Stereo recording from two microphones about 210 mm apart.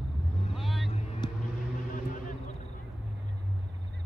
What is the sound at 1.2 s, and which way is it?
Vehicle, 20° left (ahead or behind).